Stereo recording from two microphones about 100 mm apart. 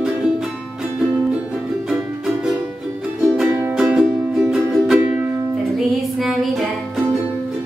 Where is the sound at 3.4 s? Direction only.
15° right (ahead or behind).